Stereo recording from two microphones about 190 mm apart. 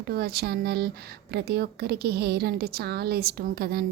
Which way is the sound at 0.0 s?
55° right (ahead or behind).